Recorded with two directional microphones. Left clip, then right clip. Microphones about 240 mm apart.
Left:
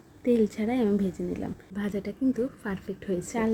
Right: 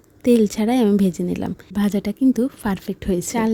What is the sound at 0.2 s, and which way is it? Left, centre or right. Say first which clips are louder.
A woman's voice: right 8 dB; right.